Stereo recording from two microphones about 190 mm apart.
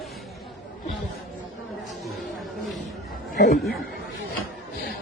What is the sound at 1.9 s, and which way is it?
Chatter, centre (ahead or behind).